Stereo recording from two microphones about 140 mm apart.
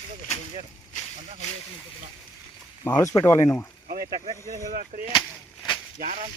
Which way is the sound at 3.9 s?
90° right.